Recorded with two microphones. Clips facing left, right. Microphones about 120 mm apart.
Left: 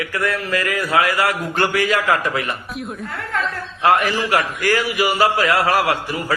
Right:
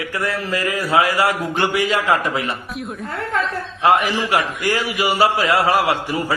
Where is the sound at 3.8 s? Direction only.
30° right (ahead or behind).